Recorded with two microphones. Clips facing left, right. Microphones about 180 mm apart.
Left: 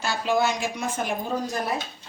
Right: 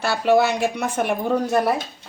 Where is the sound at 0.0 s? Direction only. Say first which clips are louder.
Right 6 dB; 65° right (ahead or behind).